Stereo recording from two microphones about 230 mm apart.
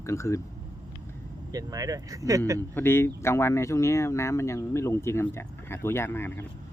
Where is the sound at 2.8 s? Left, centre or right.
Centre.